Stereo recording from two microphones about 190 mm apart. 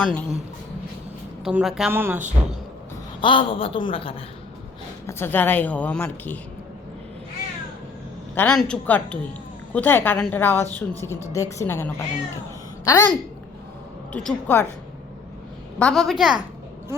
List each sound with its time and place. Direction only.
0.0 s a woman's voice: 5° left (ahead or behind)
1.5 s a woman's voice: 5° right (ahead or behind)
3.2 s a woman's voice: 25° left (ahead or behind)
5.0 s a woman's voice: 10° left (ahead or behind)
8.4 s a woman's voice: 5° left (ahead or behind)
14.1 s a woman's voice: 5° left (ahead or behind)
15.8 s a woman's voice: centre (ahead or behind)